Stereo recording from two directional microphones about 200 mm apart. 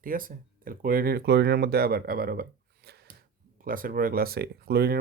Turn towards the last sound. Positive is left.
turn(degrees=-50)  # may be behind; listen again after turning